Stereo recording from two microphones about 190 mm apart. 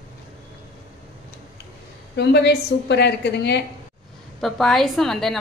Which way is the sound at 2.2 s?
60° left (ahead or behind).